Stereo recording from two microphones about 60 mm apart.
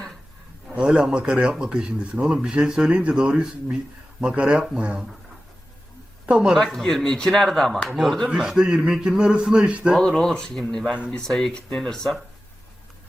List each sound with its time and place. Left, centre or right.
0.7 s speech: centre
6.2 s speech: centre
6.7 s speech: centre
8.3 s speech: centre
10.0 s speech: centre